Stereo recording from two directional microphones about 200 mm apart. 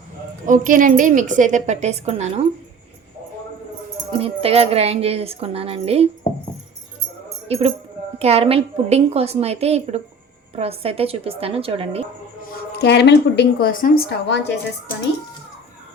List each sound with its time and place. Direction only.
0.4 s a woman's voice: 40° right (ahead or behind)
4.2 s a woman's voice: 30° right (ahead or behind)
7.4 s a woman's voice: 30° right (ahead or behind)
12.8 s a woman's voice: 55° left (ahead or behind)